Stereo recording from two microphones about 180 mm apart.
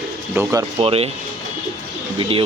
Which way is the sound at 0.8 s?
35° right (ahead or behind).